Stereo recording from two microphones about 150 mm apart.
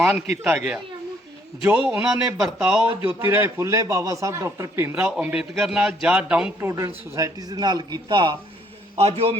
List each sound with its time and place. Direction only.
0.0 s a man's voice: 15° right (ahead or behind); by 8.4 s 30° right (ahead or behind)
9.0 s a man's voice: 45° right (ahead or behind)